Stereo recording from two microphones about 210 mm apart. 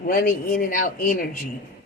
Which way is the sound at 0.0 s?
45° left (ahead or behind).